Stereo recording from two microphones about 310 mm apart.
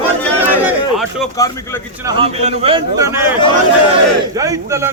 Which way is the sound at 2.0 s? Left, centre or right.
Centre.